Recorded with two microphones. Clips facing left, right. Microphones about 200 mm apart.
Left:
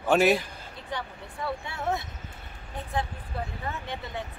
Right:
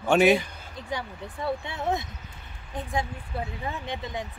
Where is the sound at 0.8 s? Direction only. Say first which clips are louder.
Right 2 dB; 10° right (ahead or behind).